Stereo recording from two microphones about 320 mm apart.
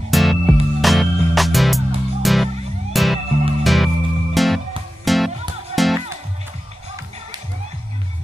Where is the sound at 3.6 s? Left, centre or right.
Centre.